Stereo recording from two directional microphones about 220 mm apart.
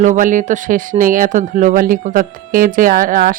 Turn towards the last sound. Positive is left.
turn(degrees=-40)  # may be behind; listen again after turning